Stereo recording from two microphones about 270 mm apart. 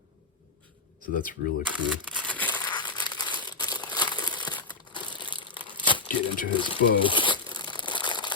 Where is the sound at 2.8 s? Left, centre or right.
Centre.